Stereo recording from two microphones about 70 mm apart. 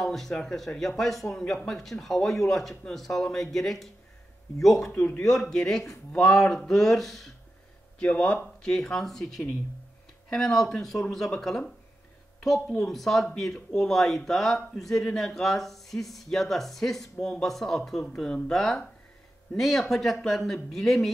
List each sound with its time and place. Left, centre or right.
0.0 s speech: centre
4.9 s speech: centre
5.2 s speech: centre
8.0 s speech: centre
12.7 s speech: centre